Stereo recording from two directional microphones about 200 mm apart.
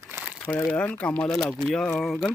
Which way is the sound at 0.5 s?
10° left (ahead or behind).